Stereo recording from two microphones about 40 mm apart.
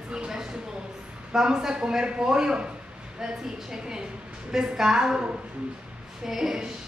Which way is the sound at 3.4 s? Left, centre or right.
Centre.